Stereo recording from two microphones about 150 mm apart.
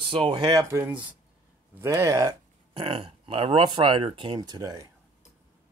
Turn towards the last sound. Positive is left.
turn(degrees=-25)  # may be behind; listen again after turning